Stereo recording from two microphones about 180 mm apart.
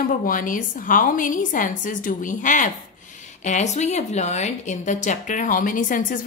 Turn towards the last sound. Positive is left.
turn(degrees=50)  # may be behind; listen again after turning